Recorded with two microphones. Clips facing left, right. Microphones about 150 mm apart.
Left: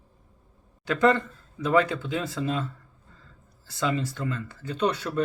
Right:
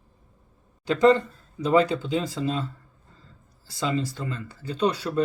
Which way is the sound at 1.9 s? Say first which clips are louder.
Right 3 dB; 20° right (ahead or behind).